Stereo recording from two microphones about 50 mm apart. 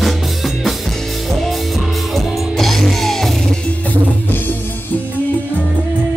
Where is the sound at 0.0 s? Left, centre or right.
Centre.